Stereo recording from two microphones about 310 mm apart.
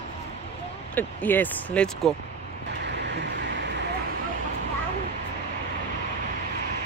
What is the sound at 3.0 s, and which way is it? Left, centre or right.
Vehicle, right.